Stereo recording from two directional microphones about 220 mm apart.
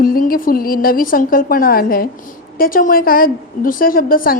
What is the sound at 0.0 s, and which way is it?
A woman's voice, 40° left (ahead or behind).